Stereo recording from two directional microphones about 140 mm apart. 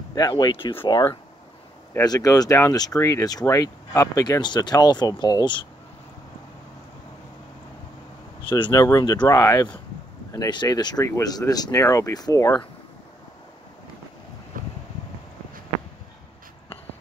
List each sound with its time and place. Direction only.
0.1 s speech: 30° left (ahead or behind)
8.5 s speech: 35° left (ahead or behind)
14.5 s boat: 75° right (ahead or behind)